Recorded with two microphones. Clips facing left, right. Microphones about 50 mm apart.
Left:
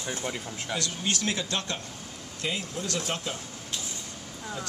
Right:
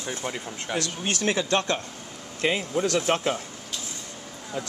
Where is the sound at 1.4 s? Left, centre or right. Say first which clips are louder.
Right 7 dB; right.